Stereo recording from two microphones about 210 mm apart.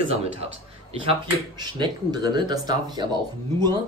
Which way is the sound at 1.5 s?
20° right (ahead or behind).